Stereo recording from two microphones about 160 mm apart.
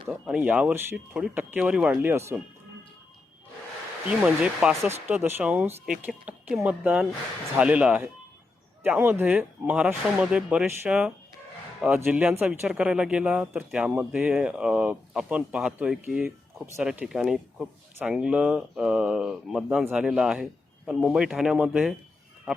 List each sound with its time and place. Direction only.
0.1 s speech: 10° right (ahead or behind)
4.1 s speech: 5° right (ahead or behind)
4.9 s speech: 15° right (ahead or behind)